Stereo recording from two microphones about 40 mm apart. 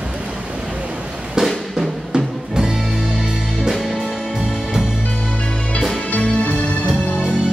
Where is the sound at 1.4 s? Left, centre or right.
Centre.